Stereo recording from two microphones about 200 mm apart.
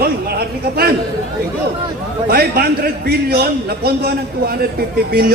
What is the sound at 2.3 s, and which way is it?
A man's voice, 50° right (ahead or behind).